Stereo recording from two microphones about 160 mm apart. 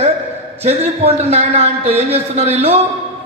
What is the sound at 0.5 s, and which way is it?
A man's voice, 40° right (ahead or behind).